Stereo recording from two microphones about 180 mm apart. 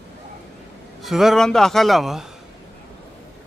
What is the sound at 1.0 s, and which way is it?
A man's voice, centre (ahead or behind).